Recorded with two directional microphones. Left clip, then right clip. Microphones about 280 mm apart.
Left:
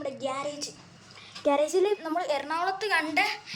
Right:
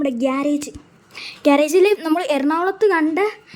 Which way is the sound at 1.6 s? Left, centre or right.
Right.